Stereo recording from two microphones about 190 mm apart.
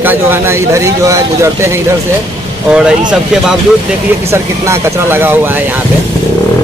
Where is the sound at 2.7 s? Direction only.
5° right (ahead or behind).